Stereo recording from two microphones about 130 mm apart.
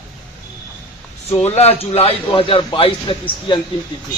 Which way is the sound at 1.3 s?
55° left (ahead or behind).